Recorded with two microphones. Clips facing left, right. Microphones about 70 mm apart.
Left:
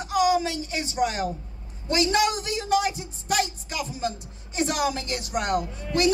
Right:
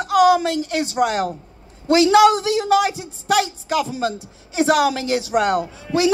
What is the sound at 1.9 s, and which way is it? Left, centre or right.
A man's voice, right.